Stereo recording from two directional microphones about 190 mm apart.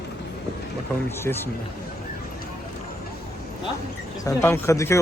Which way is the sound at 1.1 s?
10° left (ahead or behind).